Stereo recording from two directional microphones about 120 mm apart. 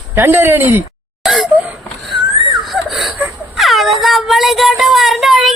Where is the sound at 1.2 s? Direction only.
Centre (ahead or behind).